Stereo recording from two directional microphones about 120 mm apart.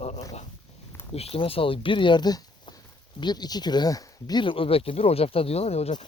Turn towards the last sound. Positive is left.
turn(degrees=60)  # may be behind; listen again after turning